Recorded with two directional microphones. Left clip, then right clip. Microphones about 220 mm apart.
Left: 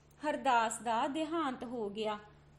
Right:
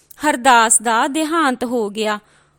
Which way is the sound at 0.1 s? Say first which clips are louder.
Right 18 dB; 45° right (ahead or behind).